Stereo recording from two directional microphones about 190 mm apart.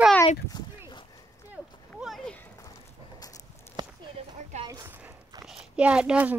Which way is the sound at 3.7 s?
35° right (ahead or behind).